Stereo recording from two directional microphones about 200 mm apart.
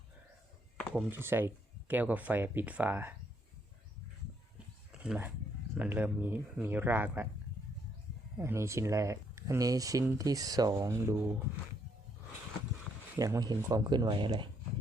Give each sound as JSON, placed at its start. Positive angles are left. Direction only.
{"t": 0.8, "sound": "a sound", "side_deg": 5}
{"t": 1.1, "sound": "speech", "side_deg": -10}
{"t": 4.9, "sound": "a sound", "side_deg": -5}
{"t": 5.7, "sound": "speech", "side_deg": -10}
{"t": 8.4, "sound": "speech", "side_deg": -15}
{"t": 13.1, "sound": "speech", "side_deg": -15}